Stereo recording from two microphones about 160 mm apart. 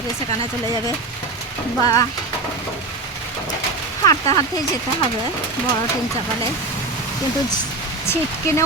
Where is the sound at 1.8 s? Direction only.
20° left (ahead or behind).